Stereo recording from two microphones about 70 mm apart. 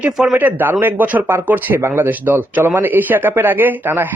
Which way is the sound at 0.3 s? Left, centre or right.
Right.